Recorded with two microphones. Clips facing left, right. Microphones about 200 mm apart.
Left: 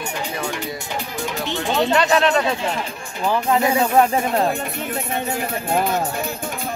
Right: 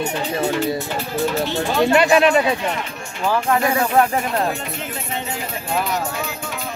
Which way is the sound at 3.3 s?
20° left (ahead or behind).